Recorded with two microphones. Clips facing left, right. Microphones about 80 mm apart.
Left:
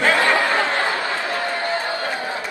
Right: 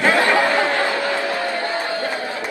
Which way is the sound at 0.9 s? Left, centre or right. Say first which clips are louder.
Right 2 dB; right.